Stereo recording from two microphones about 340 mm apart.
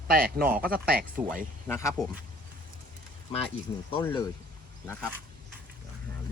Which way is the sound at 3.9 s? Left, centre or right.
Centre.